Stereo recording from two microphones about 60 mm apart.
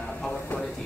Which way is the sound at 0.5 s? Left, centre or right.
Left.